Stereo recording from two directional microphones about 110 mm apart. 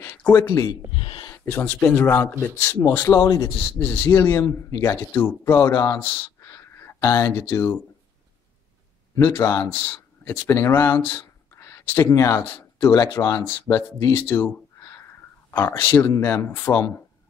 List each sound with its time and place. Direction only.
0.0 s speech: 20° left (ahead or behind)
0.9 s gasp: 50° left (ahead or behind)
1.4 s speech: 15° left (ahead or behind); by 3.5 s 35° left (ahead or behind)
3.8 s speech: 20° left (ahead or behind)
6.4 s a sound: 25° left (ahead or behind)
9.1 s speech: 30° left (ahead or behind)